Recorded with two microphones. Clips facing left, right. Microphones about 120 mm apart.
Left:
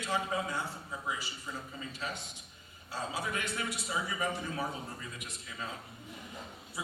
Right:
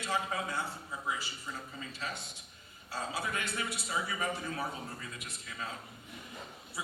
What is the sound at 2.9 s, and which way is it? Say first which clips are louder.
A man's voice: even; 15° left (ahead or behind).